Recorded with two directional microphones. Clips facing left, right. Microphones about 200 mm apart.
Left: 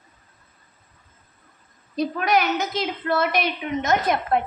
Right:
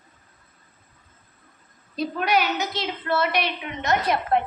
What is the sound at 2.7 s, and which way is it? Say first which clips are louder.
A woman's voice: left 2 dB; 45° left (ahead or behind).